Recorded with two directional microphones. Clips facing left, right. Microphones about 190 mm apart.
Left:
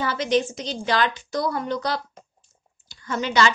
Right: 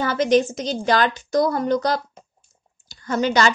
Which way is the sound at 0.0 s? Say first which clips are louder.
Right 5 dB; 45° right (ahead or behind).